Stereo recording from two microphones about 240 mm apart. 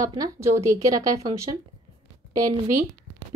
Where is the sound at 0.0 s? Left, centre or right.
Centre.